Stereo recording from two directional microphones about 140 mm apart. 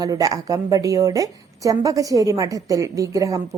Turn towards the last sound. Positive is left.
turn(degrees=-25)  # may be behind; listen again after turning